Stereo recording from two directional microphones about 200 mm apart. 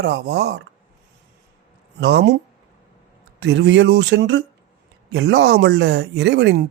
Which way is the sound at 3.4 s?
60° right (ahead or behind).